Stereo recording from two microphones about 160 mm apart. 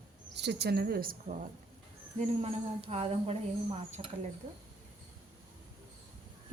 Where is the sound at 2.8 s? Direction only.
40° right (ahead or behind).